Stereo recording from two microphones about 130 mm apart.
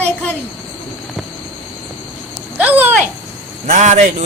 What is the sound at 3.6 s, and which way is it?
Speech, 65° right (ahead or behind).